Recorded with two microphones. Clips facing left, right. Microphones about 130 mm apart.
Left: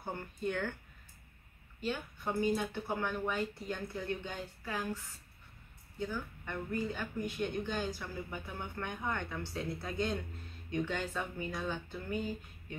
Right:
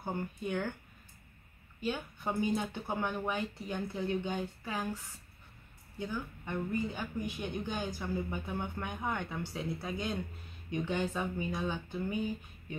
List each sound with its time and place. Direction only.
0.0 s speech: 15° right (ahead or behind)
1.8 s speech: 15° right (ahead or behind)